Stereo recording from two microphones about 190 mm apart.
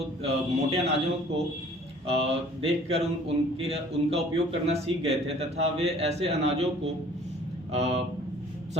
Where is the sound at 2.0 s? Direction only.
30° right (ahead or behind).